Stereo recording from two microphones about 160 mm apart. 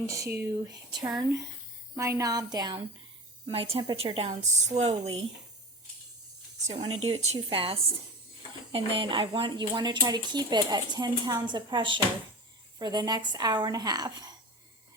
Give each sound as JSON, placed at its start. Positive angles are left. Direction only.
{"t": 0.0, "sound": "speech", "side_deg": -20}
{"t": 3.4, "sound": "a woman's voice", "side_deg": -35}
{"t": 6.7, "sound": "a woman's voice", "side_deg": -35}